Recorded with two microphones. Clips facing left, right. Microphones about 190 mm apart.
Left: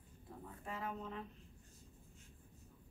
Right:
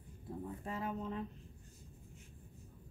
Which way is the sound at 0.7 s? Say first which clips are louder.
Right 3 dB; 30° right (ahead or behind).